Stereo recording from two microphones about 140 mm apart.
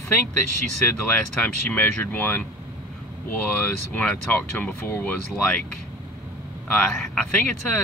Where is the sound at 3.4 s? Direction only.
10° left (ahead or behind).